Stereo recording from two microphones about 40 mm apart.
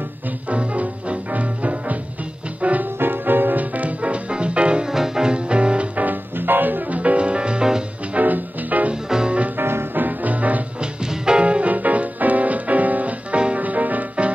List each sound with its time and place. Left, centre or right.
0.5 s music: right
3.0 s music: right
4.8 s music: centre; by 6.0 s right
6.0 s music: right
7.0 s music: right
8.1 s music: right
9.6 s music: right
9.9 s music: right
10.8 s music: right
13.6 s music: right